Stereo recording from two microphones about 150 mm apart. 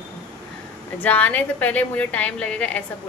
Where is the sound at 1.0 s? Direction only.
10° left (ahead or behind).